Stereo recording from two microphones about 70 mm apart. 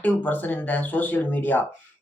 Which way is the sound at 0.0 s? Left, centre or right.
Left.